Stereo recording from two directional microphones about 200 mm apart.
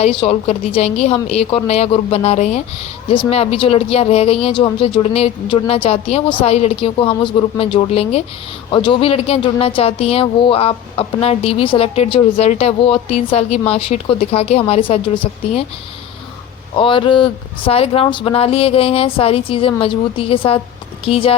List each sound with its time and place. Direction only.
0.0 s speech: 25° left (ahead or behind)
16.7 s speech: 25° left (ahead or behind)